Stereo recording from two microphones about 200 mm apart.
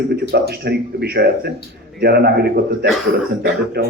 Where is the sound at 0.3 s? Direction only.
55° right (ahead or behind).